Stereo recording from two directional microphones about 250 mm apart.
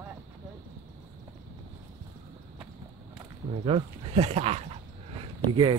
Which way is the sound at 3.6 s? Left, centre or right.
Right.